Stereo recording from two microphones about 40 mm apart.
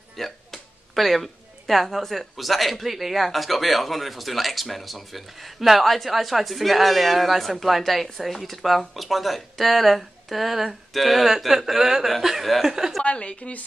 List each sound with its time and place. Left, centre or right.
0.2 s speech: centre
13.0 s a woman's voice: left